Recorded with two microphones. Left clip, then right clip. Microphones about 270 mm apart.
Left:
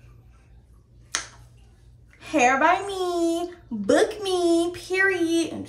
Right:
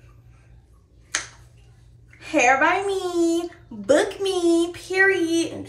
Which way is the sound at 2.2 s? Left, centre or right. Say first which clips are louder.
Right 2 dB; centre.